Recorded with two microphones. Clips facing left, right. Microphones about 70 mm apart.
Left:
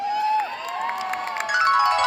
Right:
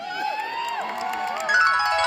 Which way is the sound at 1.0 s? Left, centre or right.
Left.